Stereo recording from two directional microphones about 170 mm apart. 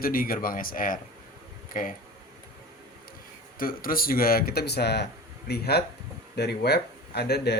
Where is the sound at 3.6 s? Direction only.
60° left (ahead or behind).